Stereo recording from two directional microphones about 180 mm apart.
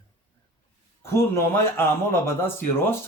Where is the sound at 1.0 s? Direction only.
15° left (ahead or behind).